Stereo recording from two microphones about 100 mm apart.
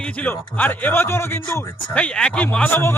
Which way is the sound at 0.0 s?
15° left (ahead or behind).